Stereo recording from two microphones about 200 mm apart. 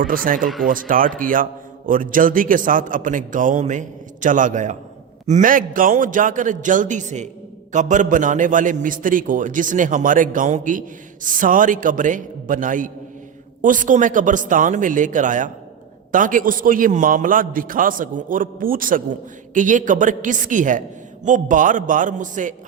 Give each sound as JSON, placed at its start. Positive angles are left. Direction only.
{"t": 0.1, "sound": "a man's voice", "side_deg": -45}